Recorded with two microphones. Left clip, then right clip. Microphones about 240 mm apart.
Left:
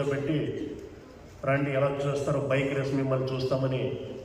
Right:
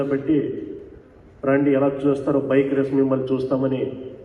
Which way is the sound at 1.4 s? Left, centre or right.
Right.